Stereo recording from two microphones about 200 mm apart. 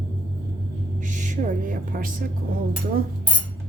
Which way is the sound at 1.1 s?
40° right (ahead or behind).